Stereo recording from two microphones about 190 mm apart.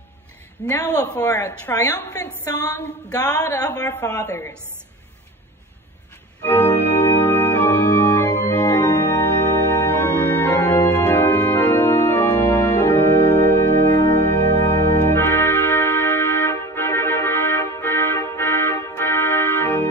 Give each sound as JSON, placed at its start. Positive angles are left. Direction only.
{"t": 0.7, "sound": "a woman's voice", "side_deg": 20}
{"t": 6.4, "sound": "organ", "side_deg": 10}
{"t": 14.3, "sound": "music", "side_deg": 15}